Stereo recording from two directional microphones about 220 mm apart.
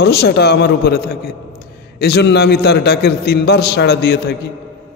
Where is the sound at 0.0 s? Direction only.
45° left (ahead or behind).